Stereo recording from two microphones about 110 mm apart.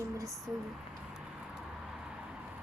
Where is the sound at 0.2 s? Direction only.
30° right (ahead or behind).